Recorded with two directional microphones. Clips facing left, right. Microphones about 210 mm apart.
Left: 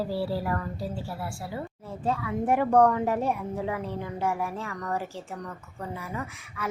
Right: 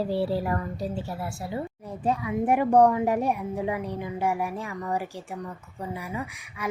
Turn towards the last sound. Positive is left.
turn(degrees=-15)  # may be behind; listen again after turning